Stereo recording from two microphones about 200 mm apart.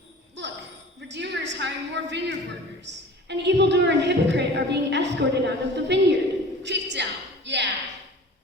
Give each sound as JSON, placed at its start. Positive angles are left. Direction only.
{"t": 0.4, "sound": "jingle bell", "side_deg": -60}
{"t": 1.0, "sound": "a woman's voice", "side_deg": -60}
{"t": 6.6, "sound": "a sound", "side_deg": -60}